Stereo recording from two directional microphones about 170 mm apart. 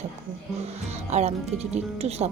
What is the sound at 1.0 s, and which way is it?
Speech, 40° right (ahead or behind).